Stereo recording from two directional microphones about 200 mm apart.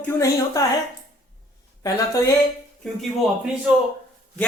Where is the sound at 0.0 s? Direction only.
15° left (ahead or behind).